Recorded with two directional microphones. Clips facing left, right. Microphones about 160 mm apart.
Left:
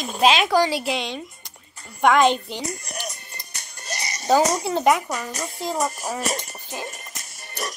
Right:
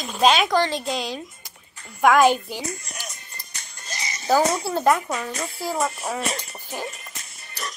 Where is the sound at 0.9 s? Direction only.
Centre (ahead or behind).